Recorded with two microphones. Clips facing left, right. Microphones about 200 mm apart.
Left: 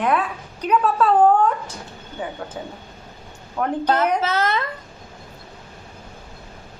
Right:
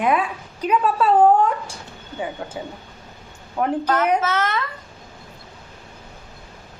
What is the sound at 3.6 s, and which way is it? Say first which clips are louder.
Speech: right 2 dB; 10° right (ahead or behind).